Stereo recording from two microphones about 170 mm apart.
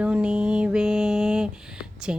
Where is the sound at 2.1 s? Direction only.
5° right (ahead or behind).